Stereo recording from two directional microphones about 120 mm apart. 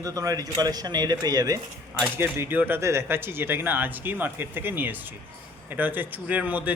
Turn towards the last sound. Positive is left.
turn(degrees=-15)  # may be behind; listen again after turning